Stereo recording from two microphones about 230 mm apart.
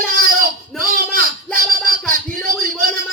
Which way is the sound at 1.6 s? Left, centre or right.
Right.